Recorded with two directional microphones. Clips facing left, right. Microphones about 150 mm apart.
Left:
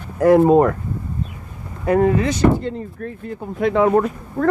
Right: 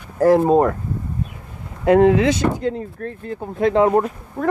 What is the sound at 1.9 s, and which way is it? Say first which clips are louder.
Speech: right 3 dB; 90° right.